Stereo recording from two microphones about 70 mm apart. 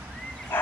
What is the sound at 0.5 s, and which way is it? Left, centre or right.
Dog, left.